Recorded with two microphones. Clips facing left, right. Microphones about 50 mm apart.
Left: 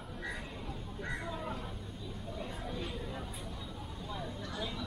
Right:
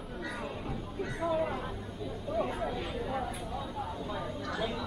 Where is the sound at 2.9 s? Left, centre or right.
Right.